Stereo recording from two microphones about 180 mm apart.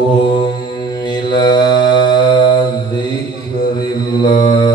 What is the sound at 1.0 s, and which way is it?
Mantra, 25° left (ahead or behind).